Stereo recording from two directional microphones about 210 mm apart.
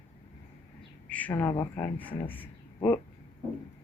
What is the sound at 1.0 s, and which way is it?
Speech, 5° left (ahead or behind).